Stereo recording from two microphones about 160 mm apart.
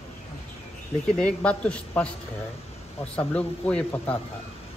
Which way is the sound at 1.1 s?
5° left (ahead or behind).